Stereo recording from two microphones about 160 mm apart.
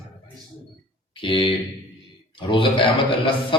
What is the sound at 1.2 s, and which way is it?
Speech, 30° left (ahead or behind).